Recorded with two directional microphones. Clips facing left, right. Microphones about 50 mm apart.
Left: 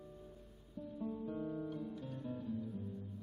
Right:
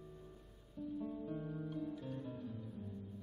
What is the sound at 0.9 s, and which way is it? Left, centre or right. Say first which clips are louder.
Guitar: left 2 dB; centre.